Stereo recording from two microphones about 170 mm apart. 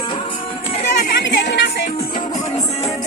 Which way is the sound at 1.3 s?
90° left.